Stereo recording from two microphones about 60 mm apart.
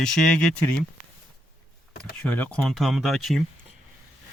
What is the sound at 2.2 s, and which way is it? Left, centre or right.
Speech, left.